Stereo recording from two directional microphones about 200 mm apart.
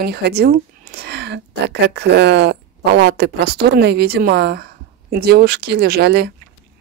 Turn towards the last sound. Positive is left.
turn(degrees=-55)  # may be behind; listen again after turning